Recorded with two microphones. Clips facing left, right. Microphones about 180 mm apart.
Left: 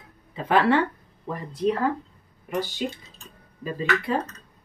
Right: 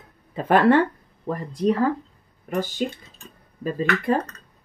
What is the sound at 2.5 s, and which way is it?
Speech, 50° right (ahead or behind).